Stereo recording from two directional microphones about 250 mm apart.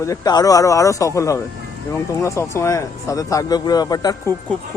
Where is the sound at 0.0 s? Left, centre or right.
Centre.